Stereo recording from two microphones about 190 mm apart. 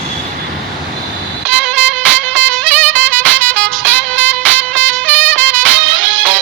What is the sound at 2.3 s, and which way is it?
Music, 10° left (ahead or behind).